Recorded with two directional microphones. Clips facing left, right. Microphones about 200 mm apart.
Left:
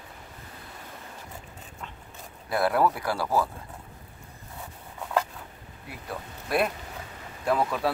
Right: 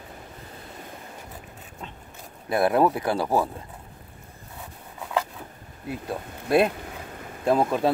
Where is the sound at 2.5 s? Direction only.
20° right (ahead or behind).